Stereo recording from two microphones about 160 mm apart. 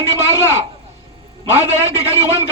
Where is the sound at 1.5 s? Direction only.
45° right (ahead or behind).